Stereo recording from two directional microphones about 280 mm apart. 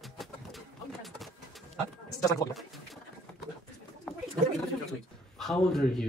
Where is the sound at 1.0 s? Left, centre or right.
Centre.